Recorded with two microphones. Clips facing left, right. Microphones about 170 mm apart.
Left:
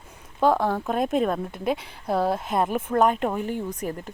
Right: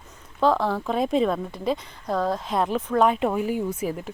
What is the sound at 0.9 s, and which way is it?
Speech, 5° left (ahead or behind).